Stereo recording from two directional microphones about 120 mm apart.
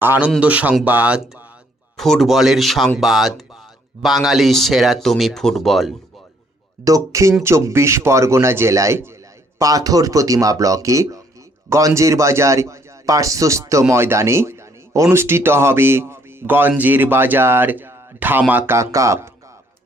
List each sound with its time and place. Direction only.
0.0 s speech: 15° right (ahead or behind)
2.0 s speech: centre (ahead or behind)
6.8 s speech: 25° right (ahead or behind)